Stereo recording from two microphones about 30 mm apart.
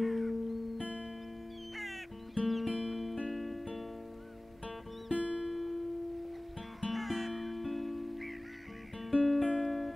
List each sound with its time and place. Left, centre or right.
0.0 s music: centre
1.8 s cat: centre
3.3 s music: centre
5.1 s music: right
5.5 s music: centre